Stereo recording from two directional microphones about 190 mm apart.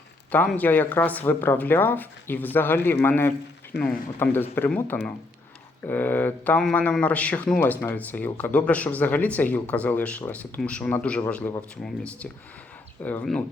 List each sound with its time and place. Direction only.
0.3 s speech: 10° left (ahead or behind)
13.0 s speech: 10° left (ahead or behind)